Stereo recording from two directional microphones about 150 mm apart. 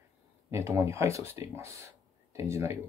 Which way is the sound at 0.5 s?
20° right (ahead or behind).